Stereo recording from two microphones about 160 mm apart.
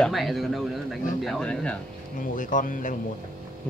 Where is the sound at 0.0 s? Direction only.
Centre (ahead or behind).